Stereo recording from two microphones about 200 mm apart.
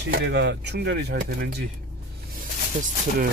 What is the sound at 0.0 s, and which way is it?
Speech, 60° right (ahead or behind).